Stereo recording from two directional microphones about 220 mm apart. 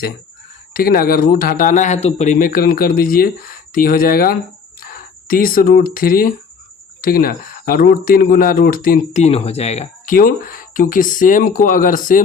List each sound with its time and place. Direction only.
0.7 s speech: 40° left (ahead or behind)